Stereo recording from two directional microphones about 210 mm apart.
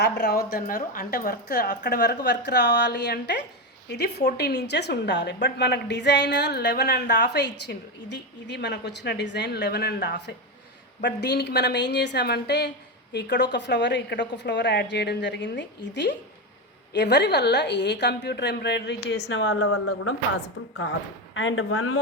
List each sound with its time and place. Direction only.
0.0 s a woman's voice: 50° left (ahead or behind); by 20.1 s 90° left
20.6 s speech: 80° left
21.3 s speech: 65° left (ahead or behind); by 22.0 s 90° left